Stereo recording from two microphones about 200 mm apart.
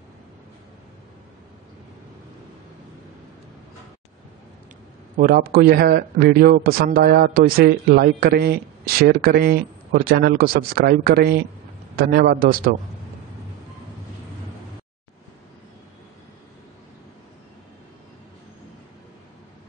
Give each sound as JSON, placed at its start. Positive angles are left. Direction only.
{"t": 5.1, "sound": "a man's voice", "side_deg": -45}